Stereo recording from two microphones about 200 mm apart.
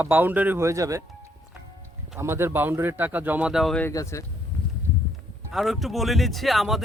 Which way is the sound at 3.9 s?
15° left (ahead or behind).